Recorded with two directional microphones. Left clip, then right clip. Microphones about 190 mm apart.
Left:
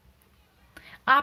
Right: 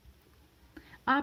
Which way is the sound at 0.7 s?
30° right (ahead or behind).